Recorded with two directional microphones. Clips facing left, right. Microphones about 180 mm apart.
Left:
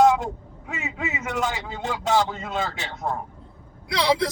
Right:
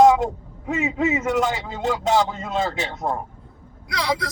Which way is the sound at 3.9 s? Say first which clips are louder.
Left 3 dB; 25° left (ahead or behind).